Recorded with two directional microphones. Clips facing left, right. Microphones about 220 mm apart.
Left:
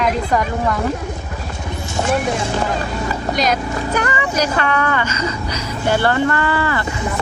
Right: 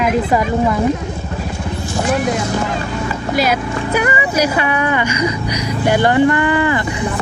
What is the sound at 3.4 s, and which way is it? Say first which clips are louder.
Speech: right 3 dB; 10° right (ahead or behind).